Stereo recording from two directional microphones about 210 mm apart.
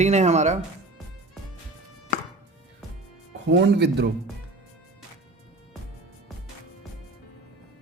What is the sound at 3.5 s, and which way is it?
Speech, 55° right (ahead or behind).